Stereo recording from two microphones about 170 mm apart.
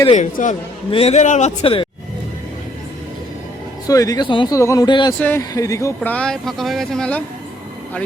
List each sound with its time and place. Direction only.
0.1 s a man's voice: 45° left (ahead or behind)
0.9 s a man's voice: 35° left (ahead or behind)
3.8 s speech: 20° left (ahead or behind)
6.0 s speech: 5° left (ahead or behind)